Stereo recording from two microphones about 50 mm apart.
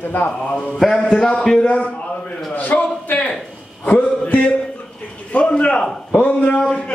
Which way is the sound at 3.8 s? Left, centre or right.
Left.